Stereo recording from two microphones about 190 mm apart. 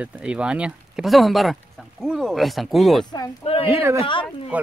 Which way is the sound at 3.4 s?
30° left (ahead or behind).